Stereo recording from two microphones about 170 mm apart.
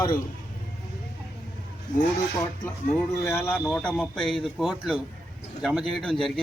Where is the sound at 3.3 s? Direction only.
10° left (ahead or behind).